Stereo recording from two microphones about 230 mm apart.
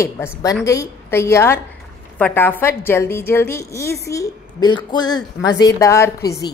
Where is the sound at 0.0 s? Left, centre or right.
Centre.